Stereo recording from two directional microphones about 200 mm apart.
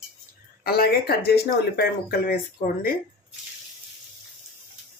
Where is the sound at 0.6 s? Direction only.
50° left (ahead or behind).